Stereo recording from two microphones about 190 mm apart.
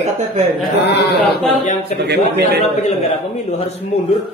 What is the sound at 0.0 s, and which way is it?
Chuckle, 35° right (ahead or behind).